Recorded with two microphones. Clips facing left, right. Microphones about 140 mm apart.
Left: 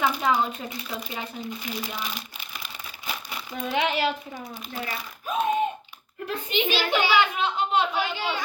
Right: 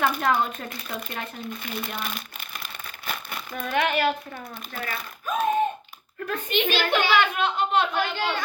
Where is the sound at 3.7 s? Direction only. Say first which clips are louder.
Right 2 dB; 55° right (ahead or behind).